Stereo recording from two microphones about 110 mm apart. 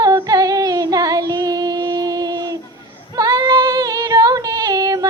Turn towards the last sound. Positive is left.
turn(degrees=-35)  # may be behind; listen again after turning